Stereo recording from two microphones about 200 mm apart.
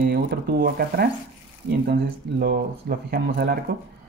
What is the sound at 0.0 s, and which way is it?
Speech, 55° right (ahead or behind).